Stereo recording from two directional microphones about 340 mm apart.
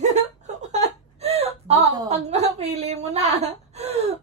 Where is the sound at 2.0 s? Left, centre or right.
Centre.